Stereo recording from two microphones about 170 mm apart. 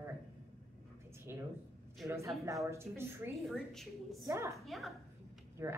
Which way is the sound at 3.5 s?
Centre (ahead or behind).